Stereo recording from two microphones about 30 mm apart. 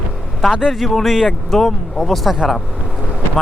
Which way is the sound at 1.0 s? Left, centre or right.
Centre.